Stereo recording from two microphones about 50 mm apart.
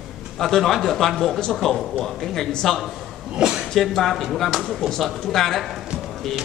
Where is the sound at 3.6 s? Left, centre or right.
Centre.